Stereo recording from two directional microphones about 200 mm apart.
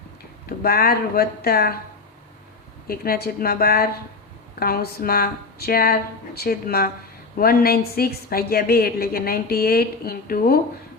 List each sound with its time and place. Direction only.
0.4 s a woman's voice: 50° left (ahead or behind)
2.8 s a woman's voice: 50° left (ahead or behind)